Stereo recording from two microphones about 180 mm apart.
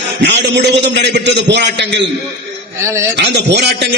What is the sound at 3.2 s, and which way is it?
Speech, 70° right (ahead or behind).